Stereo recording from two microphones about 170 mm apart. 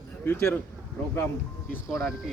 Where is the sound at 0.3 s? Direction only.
15° left (ahead or behind).